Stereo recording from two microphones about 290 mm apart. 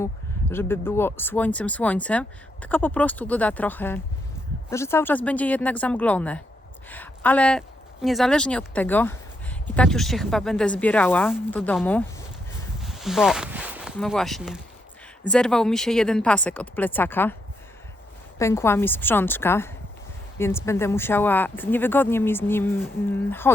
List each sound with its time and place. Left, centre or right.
0.5 s speech: centre
12.8 s a sound: centre
15.3 s speech: centre
18.3 s speech: centre